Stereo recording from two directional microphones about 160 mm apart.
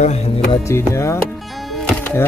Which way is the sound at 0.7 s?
15° left (ahead or behind).